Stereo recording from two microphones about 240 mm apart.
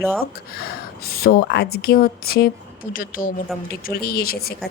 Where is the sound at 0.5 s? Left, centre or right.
Left.